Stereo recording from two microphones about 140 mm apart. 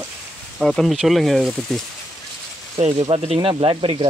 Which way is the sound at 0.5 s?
Centre (ahead or behind).